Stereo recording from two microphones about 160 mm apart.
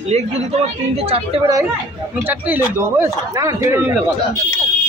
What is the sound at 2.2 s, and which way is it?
Speech, 10° right (ahead or behind).